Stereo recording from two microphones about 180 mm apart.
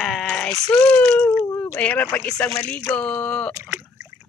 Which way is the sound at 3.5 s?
15° right (ahead or behind).